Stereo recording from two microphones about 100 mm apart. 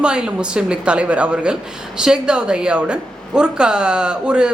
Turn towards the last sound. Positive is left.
turn(degrees=-10)  # may be behind; listen again after turning